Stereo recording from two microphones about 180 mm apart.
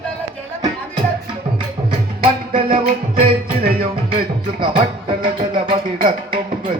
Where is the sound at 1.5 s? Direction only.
30° right (ahead or behind).